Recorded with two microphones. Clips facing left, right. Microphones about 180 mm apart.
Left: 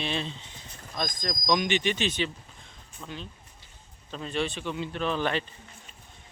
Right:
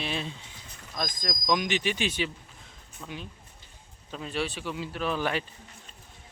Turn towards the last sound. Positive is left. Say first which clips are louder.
# left 1 dB
turn(degrees=-10)  # may be behind; listen again after turning